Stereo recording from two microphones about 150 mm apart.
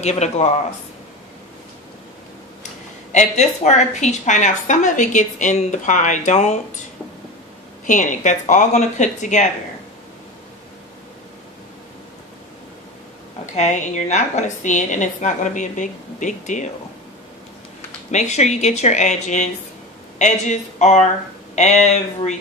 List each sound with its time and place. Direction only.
0.0 s a woman's voice: 50° left (ahead or behind)
3.1 s a woman's voice: 50° left (ahead or behind)
7.8 s speech: 55° left (ahead or behind)
13.6 s a woman's voice: 55° left (ahead or behind)
18.1 s a woman's voice: 50° left (ahead or behind)